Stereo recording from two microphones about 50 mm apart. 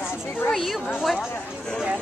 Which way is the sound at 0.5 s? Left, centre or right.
Centre.